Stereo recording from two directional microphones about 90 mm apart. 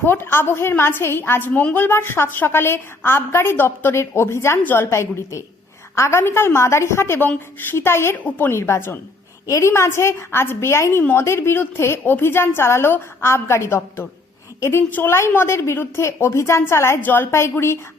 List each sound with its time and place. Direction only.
0.0 s a woman's voice: 25° left (ahead or behind)